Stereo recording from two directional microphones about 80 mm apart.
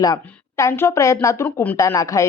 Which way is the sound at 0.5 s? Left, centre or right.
Left.